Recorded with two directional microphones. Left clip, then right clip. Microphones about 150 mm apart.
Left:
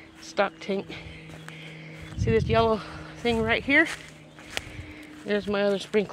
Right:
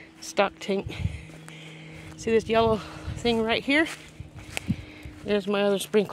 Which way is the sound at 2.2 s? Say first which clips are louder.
Right 1 dB; 40° right (ahead or behind).